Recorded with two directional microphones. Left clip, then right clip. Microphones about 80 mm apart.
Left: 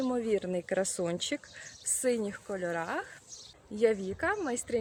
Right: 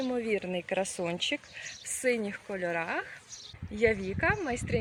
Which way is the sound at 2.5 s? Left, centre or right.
Left.